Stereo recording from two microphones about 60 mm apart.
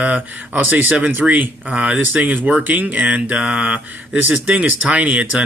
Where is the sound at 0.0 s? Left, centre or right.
Right.